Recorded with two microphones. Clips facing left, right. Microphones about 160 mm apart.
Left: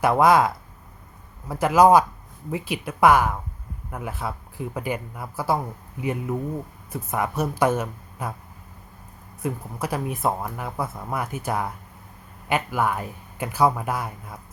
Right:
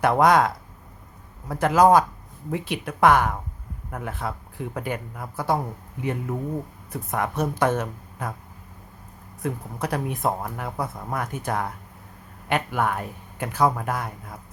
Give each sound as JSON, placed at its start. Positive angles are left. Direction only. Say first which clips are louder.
{"t": 0.0, "sound": "speech", "louder": "left 1 dB", "side_deg": 5}
{"t": 9.4, "sound": "speech", "louder": "even", "side_deg": 5}